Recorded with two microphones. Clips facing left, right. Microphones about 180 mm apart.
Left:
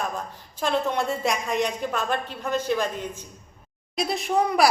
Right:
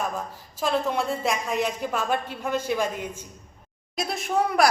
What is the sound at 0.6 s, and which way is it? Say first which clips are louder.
A woman's voice: even; centre (ahead or behind).